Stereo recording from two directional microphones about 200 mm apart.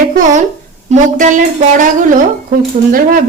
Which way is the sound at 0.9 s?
40° right (ahead or behind).